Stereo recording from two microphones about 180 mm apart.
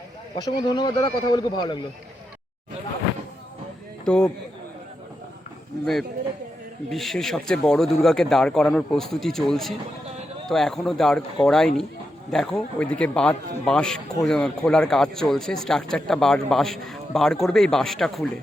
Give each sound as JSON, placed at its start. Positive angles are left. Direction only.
{"t": 0.3, "sound": "speech", "side_deg": 25}
{"t": 4.0, "sound": "a man's voice", "side_deg": 5}
{"t": 5.8, "sound": "a man's voice", "side_deg": 0}